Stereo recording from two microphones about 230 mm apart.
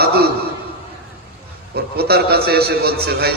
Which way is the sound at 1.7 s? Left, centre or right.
Right.